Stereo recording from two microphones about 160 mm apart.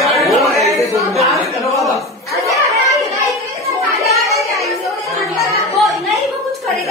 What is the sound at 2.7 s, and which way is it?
Music, 20° right (ahead or behind).